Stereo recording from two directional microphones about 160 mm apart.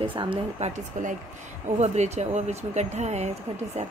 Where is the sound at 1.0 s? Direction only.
50° right (ahead or behind).